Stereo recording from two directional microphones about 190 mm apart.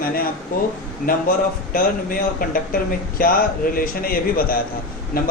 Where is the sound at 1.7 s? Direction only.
50° left (ahead or behind).